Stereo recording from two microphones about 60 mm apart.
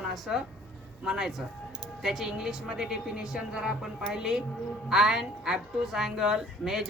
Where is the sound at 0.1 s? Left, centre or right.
Centre.